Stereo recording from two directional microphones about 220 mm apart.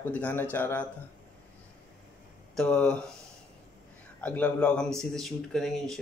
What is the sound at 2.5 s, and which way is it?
Speech, 5° left (ahead or behind).